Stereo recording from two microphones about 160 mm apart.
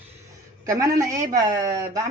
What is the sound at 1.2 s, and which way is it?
Speech, 60° right (ahead or behind).